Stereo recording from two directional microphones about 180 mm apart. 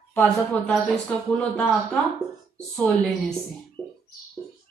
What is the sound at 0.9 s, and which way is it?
A woman's voice, 5° left (ahead or behind).